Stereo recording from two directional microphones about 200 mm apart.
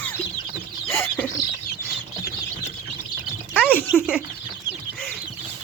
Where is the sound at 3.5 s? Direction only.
5° right (ahead or behind).